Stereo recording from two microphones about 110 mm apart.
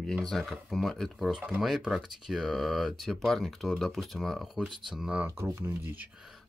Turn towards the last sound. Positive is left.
turn(degrees=0)  # may be behind; listen again after turning